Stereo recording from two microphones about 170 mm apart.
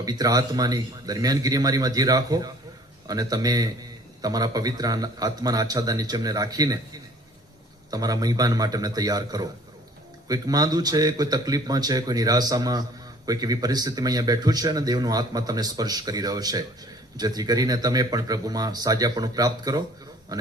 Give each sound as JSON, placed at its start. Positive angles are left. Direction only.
{"t": 0.0, "sound": "speech", "side_deg": -20}
{"t": 7.9, "sound": "speech", "side_deg": -20}